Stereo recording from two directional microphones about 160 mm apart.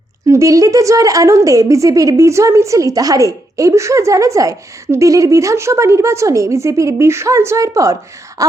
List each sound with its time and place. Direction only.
0.3 s a woman's voice: 20° right (ahead or behind)